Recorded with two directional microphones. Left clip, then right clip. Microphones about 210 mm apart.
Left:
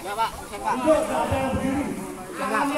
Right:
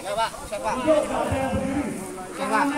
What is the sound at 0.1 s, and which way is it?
Speech, 45° right (ahead or behind).